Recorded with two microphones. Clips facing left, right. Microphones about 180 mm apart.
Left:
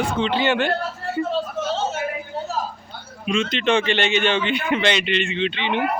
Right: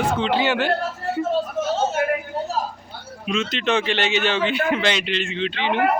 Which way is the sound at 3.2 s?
5° right (ahead or behind).